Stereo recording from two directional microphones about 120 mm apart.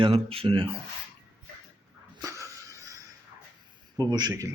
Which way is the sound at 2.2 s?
30° right (ahead or behind).